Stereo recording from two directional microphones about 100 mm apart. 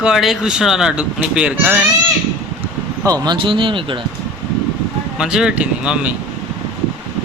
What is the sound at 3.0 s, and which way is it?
Speech, 40° right (ahead or behind).